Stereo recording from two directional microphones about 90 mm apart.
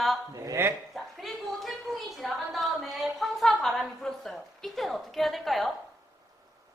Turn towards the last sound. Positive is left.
turn(degrees=0)  # may be behind; listen again after turning